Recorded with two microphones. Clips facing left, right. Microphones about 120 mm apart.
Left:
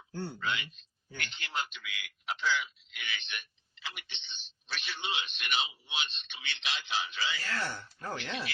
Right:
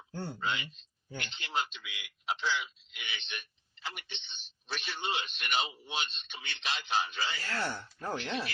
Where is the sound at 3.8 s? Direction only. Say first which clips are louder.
Right 3 dB; 40° right (ahead or behind).